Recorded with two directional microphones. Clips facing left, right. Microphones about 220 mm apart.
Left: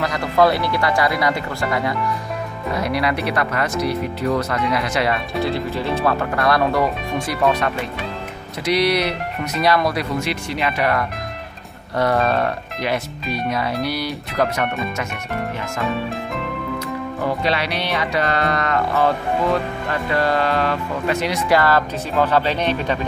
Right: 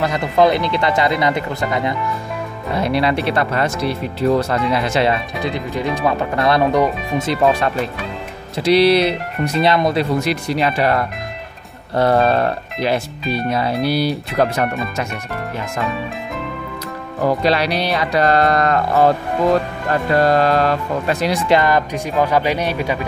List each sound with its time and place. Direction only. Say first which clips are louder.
0.4 s speech: right 2 dB; 20° right (ahead or behind)
5.4 s speech: even; 15° right (ahead or behind)
8.6 s speech: right 6 dB; 30° right (ahead or behind)
10.2 s speech: right 5 dB; 35° right (ahead or behind)
17.2 s speech: right 6 dB; 40° right (ahead or behind)
21.5 s speech: right 1 dB; 20° right (ahead or behind)